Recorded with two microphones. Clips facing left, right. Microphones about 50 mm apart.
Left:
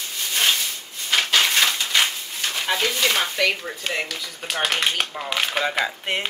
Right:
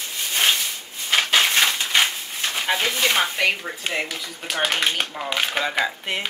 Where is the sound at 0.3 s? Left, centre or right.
Centre.